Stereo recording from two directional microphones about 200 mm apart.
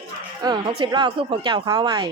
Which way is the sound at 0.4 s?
20° right (ahead or behind).